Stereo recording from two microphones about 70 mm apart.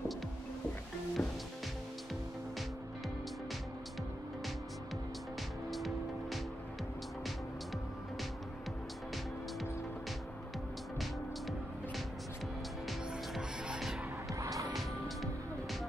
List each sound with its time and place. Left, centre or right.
1.2 s music: left
5.7 s music: centre
13.7 s music: centre
14.4 s music: right
14.7 s music: centre